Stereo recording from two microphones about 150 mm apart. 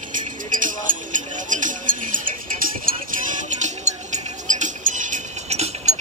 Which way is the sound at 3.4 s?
50° right (ahead or behind).